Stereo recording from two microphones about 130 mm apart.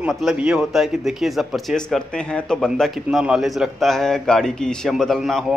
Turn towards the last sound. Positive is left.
turn(degrees=0)  # may be behind; listen again after turning